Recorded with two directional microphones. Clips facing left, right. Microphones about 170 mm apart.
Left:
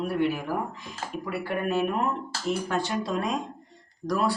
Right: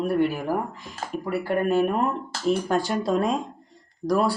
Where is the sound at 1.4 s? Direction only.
35° right (ahead or behind).